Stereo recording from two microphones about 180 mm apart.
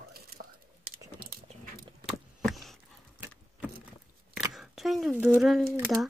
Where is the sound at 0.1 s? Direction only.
55° right (ahead or behind).